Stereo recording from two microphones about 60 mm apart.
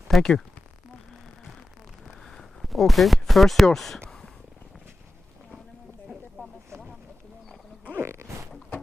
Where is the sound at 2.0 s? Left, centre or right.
Centre.